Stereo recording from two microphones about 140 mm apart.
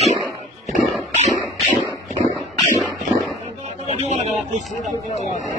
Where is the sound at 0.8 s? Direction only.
55° right (ahead or behind).